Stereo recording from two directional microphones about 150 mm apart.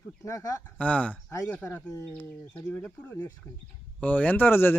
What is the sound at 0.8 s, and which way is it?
Speech, 10° left (ahead or behind).